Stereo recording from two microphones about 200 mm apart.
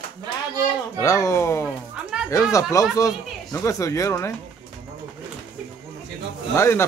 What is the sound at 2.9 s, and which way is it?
Speech, 15° left (ahead or behind).